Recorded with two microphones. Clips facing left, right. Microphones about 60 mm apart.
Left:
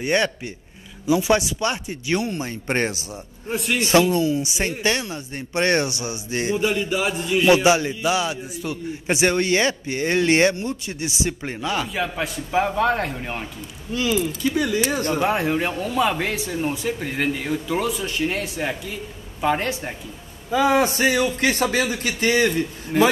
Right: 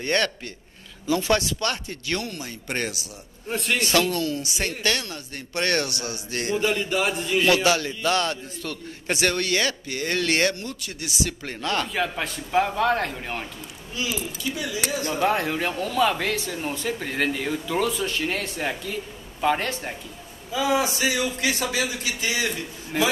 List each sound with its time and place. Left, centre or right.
0.0 s a man's voice: centre; by 3.1 s left
3.4 s a man's voice: centre
3.8 s a man's voice: left
6.5 s a man's voice: centre
7.4 s a man's voice: centre
11.6 s a man's voice: centre
13.9 s a man's voice: left
15.1 s a man's voice: centre
20.5 s a man's voice: left
22.9 s a man's voice: centre